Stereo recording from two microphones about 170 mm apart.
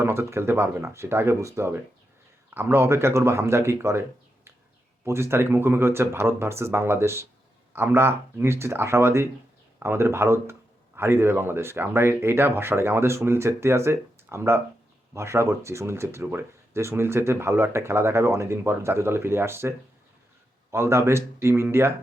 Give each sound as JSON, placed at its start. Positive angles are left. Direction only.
{"t": 0.0, "sound": "a man's voice", "side_deg": -15}
{"t": 5.0, "sound": "a man's voice", "side_deg": -15}